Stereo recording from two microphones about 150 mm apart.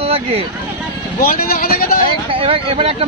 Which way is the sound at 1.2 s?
75° left (ahead or behind).